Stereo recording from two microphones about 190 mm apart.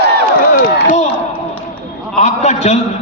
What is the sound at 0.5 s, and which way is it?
Run, 45° left (ahead or behind).